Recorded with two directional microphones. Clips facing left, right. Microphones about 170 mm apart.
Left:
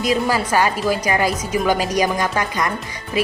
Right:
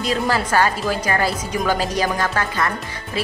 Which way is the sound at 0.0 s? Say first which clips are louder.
Left 2 dB; 10° left (ahead or behind).